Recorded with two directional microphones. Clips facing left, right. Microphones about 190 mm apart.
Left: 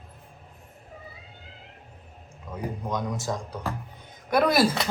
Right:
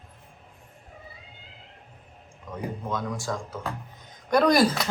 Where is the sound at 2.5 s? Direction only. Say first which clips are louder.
Even; 20° left (ahead or behind).